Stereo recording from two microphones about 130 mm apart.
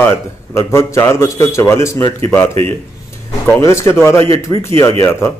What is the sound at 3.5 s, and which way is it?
Speech, 25° left (ahead or behind).